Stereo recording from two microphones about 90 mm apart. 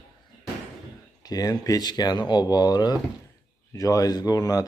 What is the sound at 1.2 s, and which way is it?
Speech, 45° left (ahead or behind).